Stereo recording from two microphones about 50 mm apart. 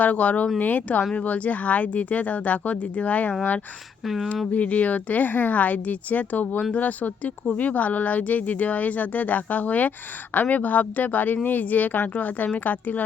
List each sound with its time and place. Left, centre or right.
0.0 s speech: left
4.0 s speech: centre
4.5 s speech: left